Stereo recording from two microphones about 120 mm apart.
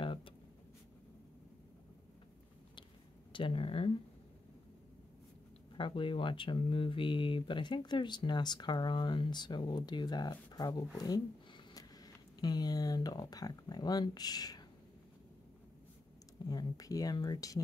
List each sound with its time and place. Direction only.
0.0 s writing: 45° left (ahead or behind)
3.3 s speech: 50° left (ahead or behind)
5.8 s speech: 45° left (ahead or behind)
16.4 s a sound: 35° left (ahead or behind)
16.7 s speech: 30° left (ahead or behind)